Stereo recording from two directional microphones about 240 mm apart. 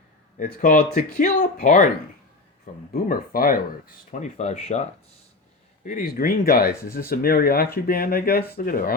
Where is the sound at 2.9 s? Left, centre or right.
Left.